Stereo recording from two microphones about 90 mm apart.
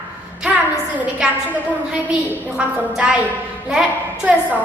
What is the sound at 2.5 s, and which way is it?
Speech, 10° right (ahead or behind).